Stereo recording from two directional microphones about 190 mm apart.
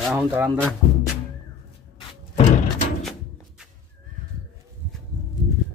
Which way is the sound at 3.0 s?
Centre (ahead or behind).